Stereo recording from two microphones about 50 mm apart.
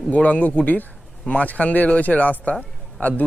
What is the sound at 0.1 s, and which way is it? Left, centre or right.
Speech, left.